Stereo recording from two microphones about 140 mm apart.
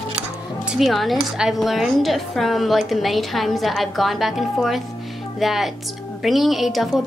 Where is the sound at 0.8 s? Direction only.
Centre (ahead or behind).